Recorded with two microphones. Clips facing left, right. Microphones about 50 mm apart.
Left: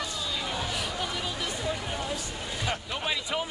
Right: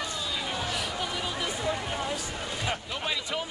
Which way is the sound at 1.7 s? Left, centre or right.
Right.